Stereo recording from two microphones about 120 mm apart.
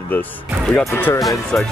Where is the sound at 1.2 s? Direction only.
Centre (ahead or behind).